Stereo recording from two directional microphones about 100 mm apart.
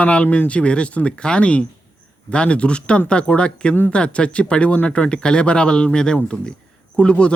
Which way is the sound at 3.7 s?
20° left (ahead or behind).